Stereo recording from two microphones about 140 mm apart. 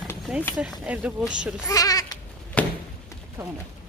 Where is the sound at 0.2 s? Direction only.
5° right (ahead or behind).